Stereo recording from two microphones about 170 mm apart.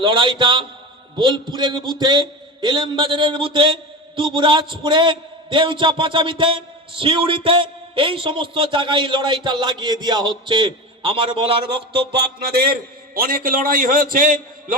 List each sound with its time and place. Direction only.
0.0 s a man's voice: 30° right (ahead or behind)
13.1 s a man's voice: 60° right (ahead or behind)